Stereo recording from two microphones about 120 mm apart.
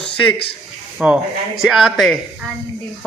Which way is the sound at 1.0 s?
5° right (ahead or behind).